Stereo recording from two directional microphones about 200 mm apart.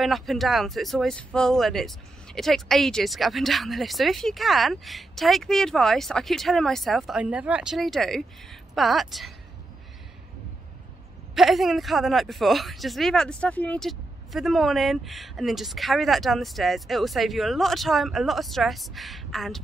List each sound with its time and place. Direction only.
0.0 s speech: centre (ahead or behind)
11.3 s speech: centre (ahead or behind)